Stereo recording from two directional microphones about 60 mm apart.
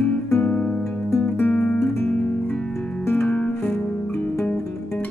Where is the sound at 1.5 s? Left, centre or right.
Centre.